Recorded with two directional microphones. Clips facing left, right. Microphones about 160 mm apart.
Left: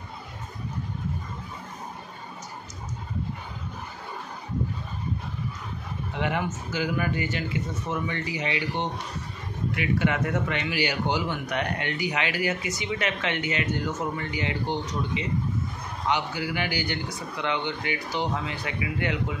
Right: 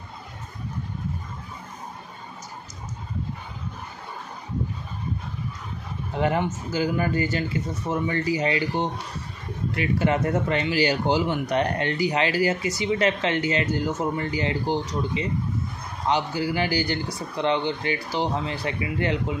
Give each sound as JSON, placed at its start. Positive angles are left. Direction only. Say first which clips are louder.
{"t": 6.1, "sound": "a man's voice", "louder": "right 5 dB", "side_deg": -35}